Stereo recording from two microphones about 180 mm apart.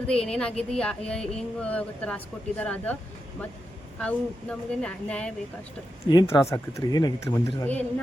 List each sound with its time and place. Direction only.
0.1 s speech: 5° left (ahead or behind)
4.0 s speech: 5° left (ahead or behind)
6.1 s speech: 25° left (ahead or behind)